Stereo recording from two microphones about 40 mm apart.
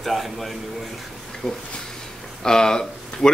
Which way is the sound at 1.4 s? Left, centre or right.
Centre.